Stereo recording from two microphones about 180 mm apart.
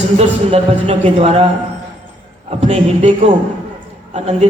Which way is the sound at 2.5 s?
35° right (ahead or behind).